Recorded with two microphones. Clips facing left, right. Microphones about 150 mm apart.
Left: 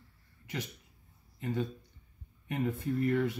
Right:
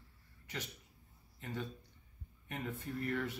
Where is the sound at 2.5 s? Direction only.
10° left (ahead or behind).